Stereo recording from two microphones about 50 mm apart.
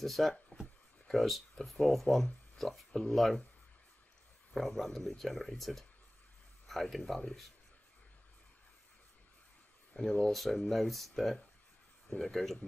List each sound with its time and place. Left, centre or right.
0.0 s speech: centre
2.5 s a sound: centre
2.9 s speech: centre
4.6 s speech: centre
9.9 s speech: left
10.3 s speech: centre